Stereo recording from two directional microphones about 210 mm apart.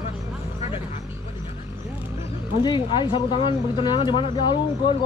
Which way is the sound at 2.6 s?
20° left (ahead or behind).